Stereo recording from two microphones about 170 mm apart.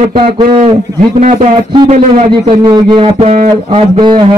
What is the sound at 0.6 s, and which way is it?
A man's voice, 45° right (ahead or behind).